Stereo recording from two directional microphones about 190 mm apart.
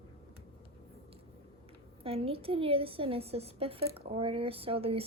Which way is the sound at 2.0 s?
30° right (ahead or behind).